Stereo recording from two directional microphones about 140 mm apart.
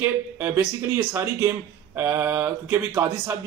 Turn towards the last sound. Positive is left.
turn(degrees=-15)  # may be behind; listen again after turning